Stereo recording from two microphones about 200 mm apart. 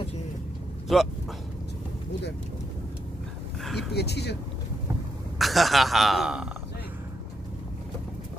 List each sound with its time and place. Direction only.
0.9 s a man's voice: centre (ahead or behind)
3.6 s speech: centre (ahead or behind)
3.9 s speech: 55° left (ahead or behind)
5.4 s a man's voice: centre (ahead or behind)